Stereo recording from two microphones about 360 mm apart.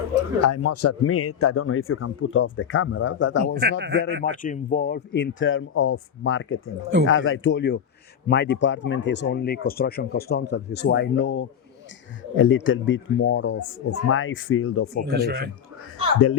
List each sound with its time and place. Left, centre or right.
0.1 s a man's voice: left
3.4 s a man's voice: right
4.2 s a man's voice: left
15.1 s a man's voice: right